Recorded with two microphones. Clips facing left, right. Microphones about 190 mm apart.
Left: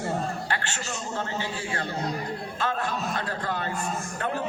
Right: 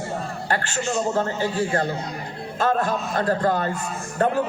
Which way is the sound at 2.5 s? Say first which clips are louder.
Right 9 dB; 45° right (ahead or behind).